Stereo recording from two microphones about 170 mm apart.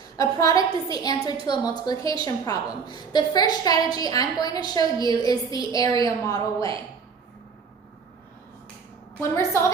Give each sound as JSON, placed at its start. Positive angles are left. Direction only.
{"t": 0.2, "sound": "a woman's voice", "side_deg": 20}
{"t": 9.3, "sound": "a woman's voice", "side_deg": 15}